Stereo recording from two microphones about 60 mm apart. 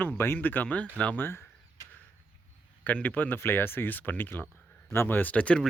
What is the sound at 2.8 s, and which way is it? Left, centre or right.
Speech, left.